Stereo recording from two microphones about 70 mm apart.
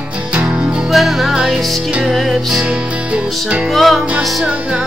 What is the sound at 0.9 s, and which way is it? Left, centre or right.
Music, centre.